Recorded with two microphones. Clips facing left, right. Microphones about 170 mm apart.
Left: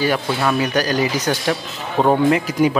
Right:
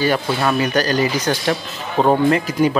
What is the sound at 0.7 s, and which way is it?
A man's voice, 10° left (ahead or behind).